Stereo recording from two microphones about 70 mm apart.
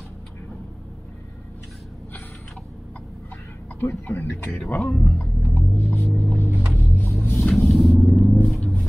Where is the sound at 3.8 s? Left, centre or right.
Left.